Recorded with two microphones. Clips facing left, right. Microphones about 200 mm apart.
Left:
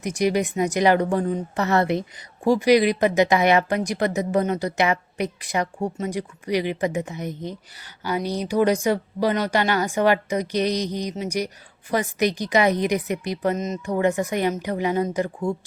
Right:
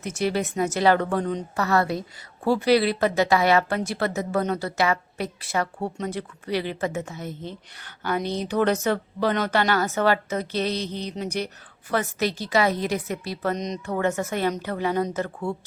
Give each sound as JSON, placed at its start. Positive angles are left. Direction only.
{"t": 0.0, "sound": "a woman's voice", "side_deg": 15}
{"t": 1.5, "sound": "a woman's voice", "side_deg": 20}
{"t": 13.6, "sound": "speech", "side_deg": 5}
{"t": 13.9, "sound": "a woman's voice", "side_deg": 15}